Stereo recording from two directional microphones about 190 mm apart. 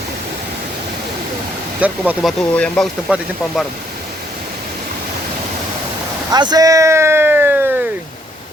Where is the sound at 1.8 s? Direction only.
5° right (ahead or behind).